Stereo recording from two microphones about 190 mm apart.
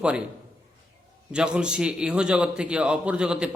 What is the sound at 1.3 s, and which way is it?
A man's voice, 5° right (ahead or behind).